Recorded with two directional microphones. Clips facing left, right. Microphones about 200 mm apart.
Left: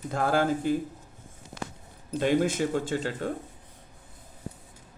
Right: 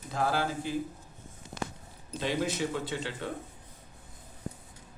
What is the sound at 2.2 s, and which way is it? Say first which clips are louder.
Speech: left 6 dB; 50° left (ahead or behind).